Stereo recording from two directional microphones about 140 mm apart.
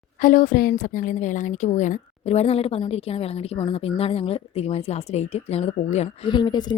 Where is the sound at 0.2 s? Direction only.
70° left (ahead or behind); by 6.1 s 50° left (ahead or behind).